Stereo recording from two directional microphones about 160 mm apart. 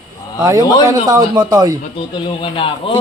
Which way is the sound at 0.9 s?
25° right (ahead or behind).